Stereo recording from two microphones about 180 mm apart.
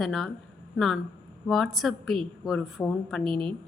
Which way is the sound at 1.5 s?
Centre (ahead or behind).